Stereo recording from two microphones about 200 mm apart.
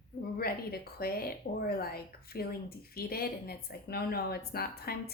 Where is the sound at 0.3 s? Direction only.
50° left (ahead or behind).